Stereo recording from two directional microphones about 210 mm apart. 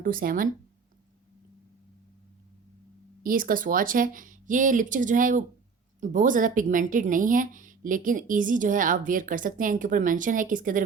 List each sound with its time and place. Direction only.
0.0 s speech: 40° right (ahead or behind)
3.2 s speech: 40° right (ahead or behind)